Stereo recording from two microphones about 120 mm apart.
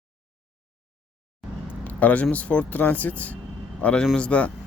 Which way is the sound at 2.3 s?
10° left (ahead or behind).